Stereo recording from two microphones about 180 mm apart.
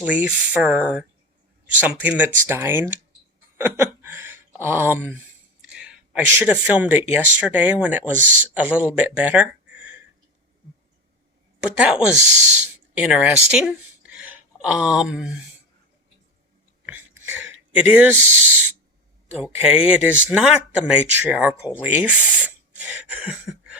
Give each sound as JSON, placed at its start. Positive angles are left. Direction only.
{"t": 0.0, "sound": "speech", "side_deg": -10}
{"t": 8.2, "sound": "a man's voice", "side_deg": -45}
{"t": 8.5, "sound": "speech", "side_deg": -10}
{"t": 11.6, "sound": "speech", "side_deg": -5}
{"t": 12.1, "sound": "speech", "side_deg": -40}
{"t": 12.9, "sound": "speech", "side_deg": -5}
{"t": 16.8, "sound": "a sound", "side_deg": -10}
{"t": 19.3, "sound": "speech", "side_deg": -10}